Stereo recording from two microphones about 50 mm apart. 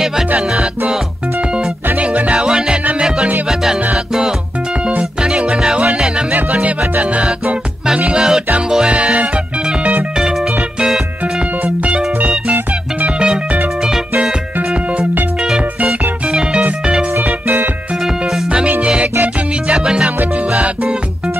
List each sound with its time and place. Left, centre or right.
0.5 s music: centre
2.0 s music: right
2.4 s music: centre
5.2 s music: right
11.6 s music: right
17.2 s music: right
19.2 s music: right